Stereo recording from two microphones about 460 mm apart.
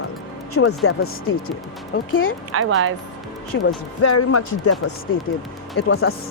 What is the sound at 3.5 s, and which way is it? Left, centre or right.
Speech, left.